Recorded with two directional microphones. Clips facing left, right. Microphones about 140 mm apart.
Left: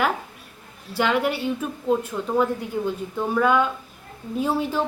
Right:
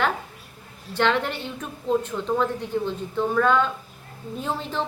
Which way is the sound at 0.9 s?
10° left (ahead or behind).